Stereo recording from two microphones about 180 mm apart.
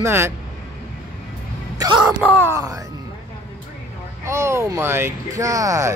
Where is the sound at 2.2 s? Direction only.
10° left (ahead or behind).